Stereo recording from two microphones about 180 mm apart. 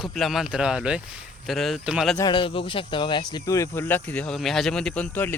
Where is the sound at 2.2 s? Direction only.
25° left (ahead or behind); by 5.3 s 10° left (ahead or behind).